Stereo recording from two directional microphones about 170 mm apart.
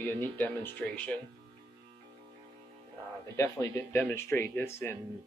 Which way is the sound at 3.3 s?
15° left (ahead or behind).